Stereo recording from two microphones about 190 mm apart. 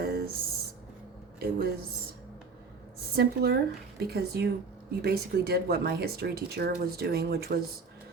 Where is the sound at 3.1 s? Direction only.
60° right (ahead or behind).